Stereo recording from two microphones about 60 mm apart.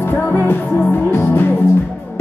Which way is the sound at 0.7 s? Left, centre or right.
Centre.